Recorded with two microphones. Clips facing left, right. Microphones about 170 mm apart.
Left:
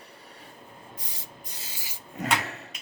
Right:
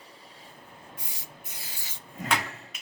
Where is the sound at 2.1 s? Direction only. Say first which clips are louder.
Left 2 dB; 70° left (ahead or behind).